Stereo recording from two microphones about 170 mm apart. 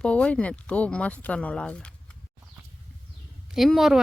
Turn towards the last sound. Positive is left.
turn(degrees=0)  # may be behind; listen again after turning